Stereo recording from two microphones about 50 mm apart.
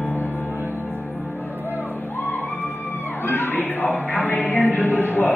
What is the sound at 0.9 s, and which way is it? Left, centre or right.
Music, left.